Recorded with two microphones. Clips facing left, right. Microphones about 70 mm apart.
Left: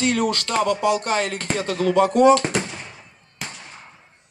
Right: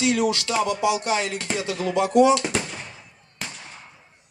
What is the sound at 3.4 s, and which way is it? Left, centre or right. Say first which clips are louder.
Fireworks: left 1 dB; centre.